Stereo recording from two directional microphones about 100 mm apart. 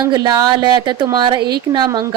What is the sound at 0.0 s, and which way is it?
Speech, 40° right (ahead or behind).